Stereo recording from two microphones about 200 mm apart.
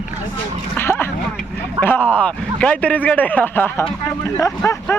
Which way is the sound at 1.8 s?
10° left (ahead or behind).